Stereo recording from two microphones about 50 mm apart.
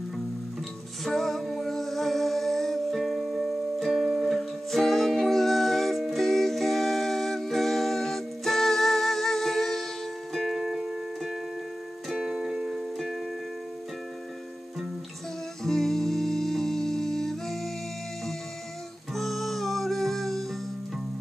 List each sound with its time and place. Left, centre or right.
1.0 s music: centre
10.6 s music: centre
15.6 s music: centre
19.1 s music: centre